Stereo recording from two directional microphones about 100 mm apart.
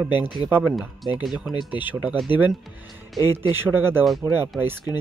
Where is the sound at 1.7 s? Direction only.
20° right (ahead or behind).